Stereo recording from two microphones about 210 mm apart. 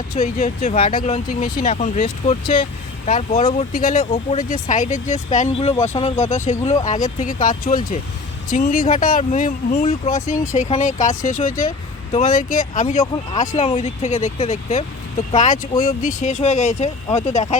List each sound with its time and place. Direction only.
0.2 s speech: 35° left (ahead or behind)
5.7 s speech: 10° left (ahead or behind)
6.4 s speech: 35° left (ahead or behind)